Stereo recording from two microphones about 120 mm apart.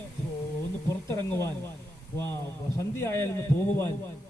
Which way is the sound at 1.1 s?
25° left (ahead or behind).